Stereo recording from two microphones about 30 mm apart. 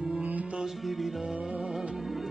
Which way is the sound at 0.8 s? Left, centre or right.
Centre.